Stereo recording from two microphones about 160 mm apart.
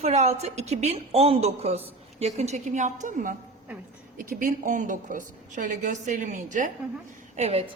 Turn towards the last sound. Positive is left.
turn(degrees=-40)  # may be behind; listen again after turning